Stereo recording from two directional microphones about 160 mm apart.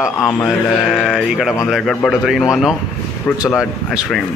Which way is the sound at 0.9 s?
5° right (ahead or behind).